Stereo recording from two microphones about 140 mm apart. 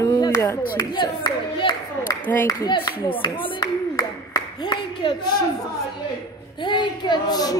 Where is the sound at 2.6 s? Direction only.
35° left (ahead or behind).